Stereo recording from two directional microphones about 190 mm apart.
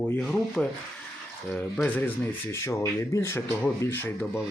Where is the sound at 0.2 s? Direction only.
5° left (ahead or behind).